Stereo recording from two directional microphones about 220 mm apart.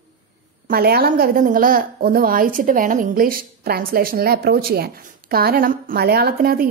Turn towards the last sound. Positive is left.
turn(degrees=-45)  # may be behind; listen again after turning